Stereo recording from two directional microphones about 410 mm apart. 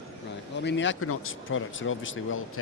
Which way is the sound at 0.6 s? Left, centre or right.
Left.